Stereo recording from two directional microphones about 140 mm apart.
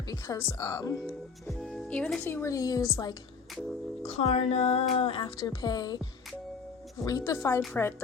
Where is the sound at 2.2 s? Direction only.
20° left (ahead or behind).